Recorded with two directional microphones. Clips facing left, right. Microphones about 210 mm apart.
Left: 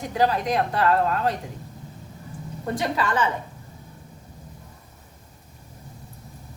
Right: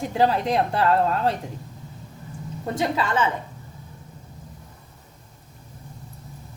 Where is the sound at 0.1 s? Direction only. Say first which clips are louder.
Right 1 dB; 25° right (ahead or behind).